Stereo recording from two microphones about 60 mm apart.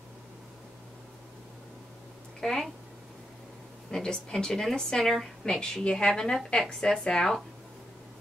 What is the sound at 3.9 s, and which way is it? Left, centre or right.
Speech, centre.